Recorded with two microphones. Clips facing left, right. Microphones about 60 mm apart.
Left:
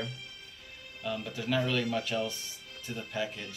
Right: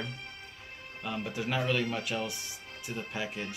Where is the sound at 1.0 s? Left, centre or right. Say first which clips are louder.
Left 1 dB; right.